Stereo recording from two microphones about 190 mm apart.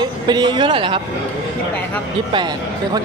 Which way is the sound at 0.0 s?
25° right (ahead or behind).